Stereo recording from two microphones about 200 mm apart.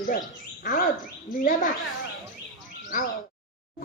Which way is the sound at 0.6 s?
40° left (ahead or behind).